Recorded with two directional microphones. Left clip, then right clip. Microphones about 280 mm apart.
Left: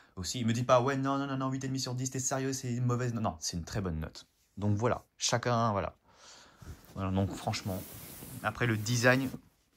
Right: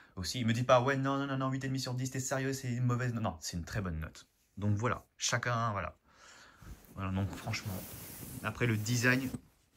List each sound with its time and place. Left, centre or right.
0.1 s speech: centre
8.4 s speech: centre